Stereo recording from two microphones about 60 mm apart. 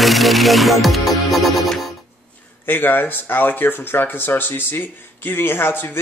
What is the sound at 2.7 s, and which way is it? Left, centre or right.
Speech, left.